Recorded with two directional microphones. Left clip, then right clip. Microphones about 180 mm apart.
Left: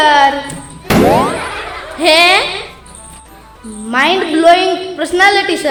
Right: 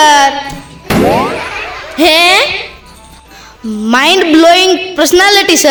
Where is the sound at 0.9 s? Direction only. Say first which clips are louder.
Even; centre (ahead or behind).